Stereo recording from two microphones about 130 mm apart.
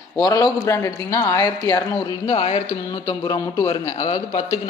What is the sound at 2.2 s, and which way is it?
Speech, 50° left (ahead or behind).